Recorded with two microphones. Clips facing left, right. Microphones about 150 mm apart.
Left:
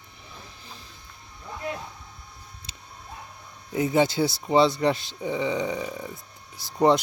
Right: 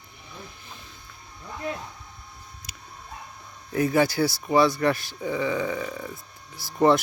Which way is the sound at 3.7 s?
20° left (ahead or behind).